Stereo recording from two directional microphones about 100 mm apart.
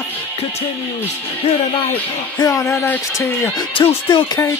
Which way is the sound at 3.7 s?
60° left (ahead or behind).